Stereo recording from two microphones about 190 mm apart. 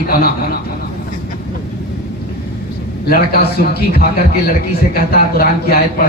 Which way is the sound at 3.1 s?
55° left (ahead or behind).